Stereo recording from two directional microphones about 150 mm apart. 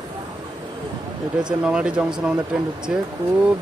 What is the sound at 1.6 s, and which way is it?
Speech, 5° right (ahead or behind).